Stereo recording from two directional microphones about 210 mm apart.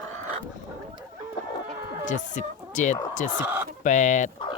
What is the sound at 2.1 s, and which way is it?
Speech, 35° left (ahead or behind).